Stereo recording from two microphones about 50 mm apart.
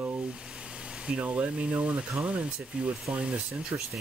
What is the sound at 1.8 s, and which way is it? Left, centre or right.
Speech, right.